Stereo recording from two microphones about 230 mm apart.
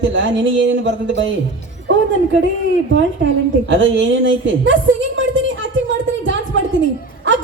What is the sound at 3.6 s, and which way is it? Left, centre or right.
A woman's voice, right.